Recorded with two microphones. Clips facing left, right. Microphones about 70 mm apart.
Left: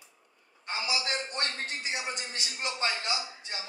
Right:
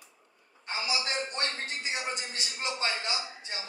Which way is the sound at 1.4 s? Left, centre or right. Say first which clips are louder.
Even; right.